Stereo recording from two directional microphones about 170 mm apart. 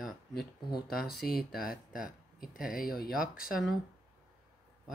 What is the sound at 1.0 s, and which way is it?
Speech, 65° left (ahead or behind).